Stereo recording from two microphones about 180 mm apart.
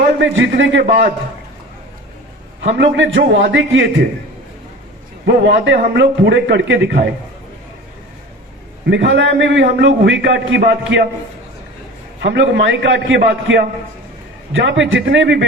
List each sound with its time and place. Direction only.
0.2 s a man's voice: 85° right; by 1.0 s 65° right (ahead or behind)
2.6 s a man's voice: 80° right
5.2 s a man's voice: 70° right (ahead or behind)
8.9 s a man's voice: 85° right
12.2 s a man's voice: 75° right (ahead or behind)
14.5 s speech: 85° right